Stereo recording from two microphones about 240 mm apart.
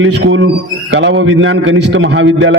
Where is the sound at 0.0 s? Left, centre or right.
Right.